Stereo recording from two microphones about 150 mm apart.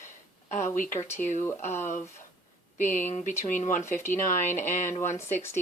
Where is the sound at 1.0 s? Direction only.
15° left (ahead or behind).